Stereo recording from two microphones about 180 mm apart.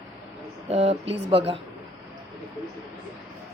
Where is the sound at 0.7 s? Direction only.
35° right (ahead or behind).